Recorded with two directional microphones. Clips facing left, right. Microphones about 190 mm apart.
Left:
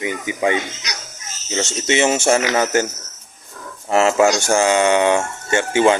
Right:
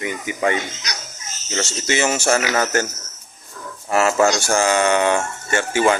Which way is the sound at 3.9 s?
25° left (ahead or behind).